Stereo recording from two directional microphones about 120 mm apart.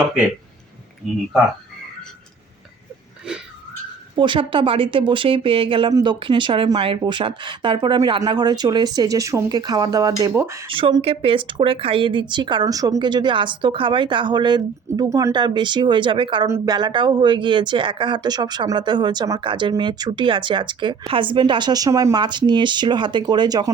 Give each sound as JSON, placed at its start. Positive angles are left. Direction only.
{"t": 1.0, "sound": "speech", "side_deg": 0}
{"t": 4.1, "sound": "a woman's voice", "side_deg": -45}
{"t": 10.7, "sound": "a woman's voice", "side_deg": -45}